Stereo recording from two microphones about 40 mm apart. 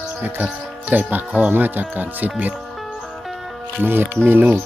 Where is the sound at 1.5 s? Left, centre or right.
Right.